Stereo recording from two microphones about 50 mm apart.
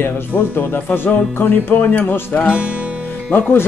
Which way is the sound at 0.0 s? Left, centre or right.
Left.